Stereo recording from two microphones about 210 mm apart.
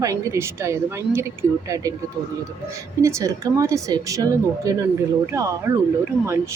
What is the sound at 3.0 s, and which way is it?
Speech, 15° right (ahead or behind).